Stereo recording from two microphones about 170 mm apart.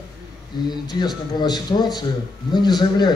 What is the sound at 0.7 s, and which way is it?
A man's voice, 25° left (ahead or behind).